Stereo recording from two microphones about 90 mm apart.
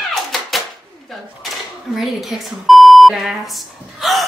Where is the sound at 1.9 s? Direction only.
Centre (ahead or behind).